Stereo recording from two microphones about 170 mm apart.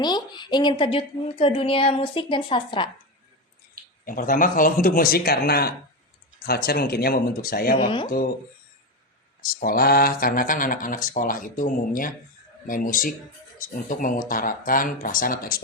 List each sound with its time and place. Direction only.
0.0 s a woman's voice: 25° left (ahead or behind)
4.0 s speech: 55° left (ahead or behind)
7.8 s speech: 30° left (ahead or behind)
9.4 s speech: 60° left (ahead or behind)